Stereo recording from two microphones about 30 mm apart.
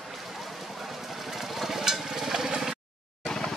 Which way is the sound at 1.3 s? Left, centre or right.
Centre.